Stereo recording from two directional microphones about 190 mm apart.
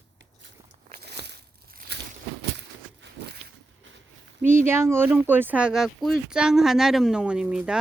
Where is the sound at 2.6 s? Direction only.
65° right (ahead or behind).